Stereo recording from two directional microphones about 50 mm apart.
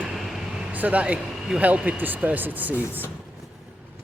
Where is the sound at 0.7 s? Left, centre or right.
Right.